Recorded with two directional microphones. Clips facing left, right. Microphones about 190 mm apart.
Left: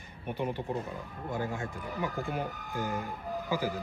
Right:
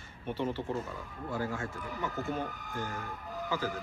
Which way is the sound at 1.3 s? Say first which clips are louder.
Left 1 dB; 20° left (ahead or behind).